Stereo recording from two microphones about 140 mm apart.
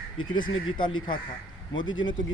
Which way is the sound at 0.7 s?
35° left (ahead or behind).